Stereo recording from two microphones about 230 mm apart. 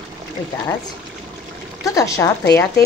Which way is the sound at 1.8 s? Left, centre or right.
Centre.